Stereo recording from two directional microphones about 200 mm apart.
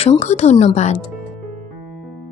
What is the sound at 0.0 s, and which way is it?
A woman's voice, 30° left (ahead or behind).